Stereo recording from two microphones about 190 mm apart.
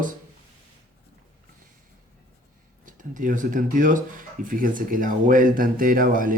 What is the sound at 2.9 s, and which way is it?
Speech, 45° right (ahead or behind).